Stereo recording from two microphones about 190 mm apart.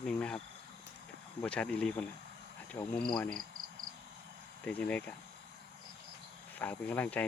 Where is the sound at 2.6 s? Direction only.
10° left (ahead or behind).